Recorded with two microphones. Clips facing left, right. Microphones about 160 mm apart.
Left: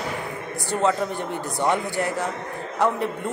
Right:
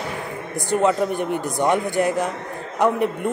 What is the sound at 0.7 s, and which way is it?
A man's voice, 15° right (ahead or behind).